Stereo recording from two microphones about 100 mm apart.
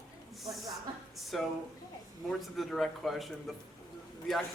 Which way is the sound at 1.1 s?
Centre (ahead or behind).